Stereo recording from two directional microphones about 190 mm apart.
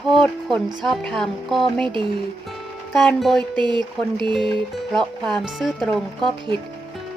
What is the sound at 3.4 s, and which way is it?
Speech, 25° right (ahead or behind).